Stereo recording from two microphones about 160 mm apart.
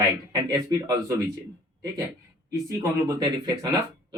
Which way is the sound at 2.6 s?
20° right (ahead or behind).